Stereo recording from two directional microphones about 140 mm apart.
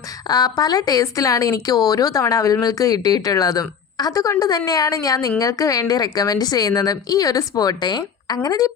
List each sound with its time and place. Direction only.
0.3 s speech: 30° left (ahead or behind)